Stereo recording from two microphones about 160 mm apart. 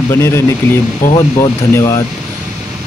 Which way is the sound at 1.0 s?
55° left (ahead or behind).